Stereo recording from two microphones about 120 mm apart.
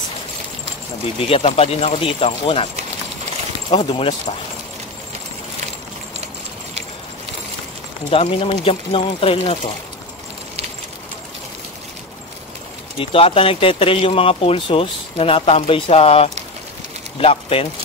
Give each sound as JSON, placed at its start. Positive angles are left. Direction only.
{"t": 1.3, "sound": "speech", "side_deg": 55}
{"t": 3.8, "sound": "speech", "side_deg": 50}
{"t": 8.1, "sound": "speech", "side_deg": 50}
{"t": 12.9, "sound": "speech", "side_deg": 50}